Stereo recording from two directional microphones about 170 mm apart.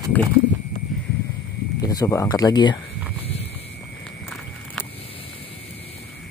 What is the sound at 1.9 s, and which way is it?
Speech, 20° left (ahead or behind).